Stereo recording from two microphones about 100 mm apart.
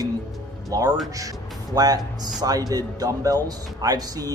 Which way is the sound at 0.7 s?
35° right (ahead or behind).